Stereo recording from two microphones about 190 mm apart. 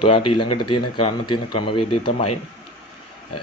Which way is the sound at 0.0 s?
25° left (ahead or behind).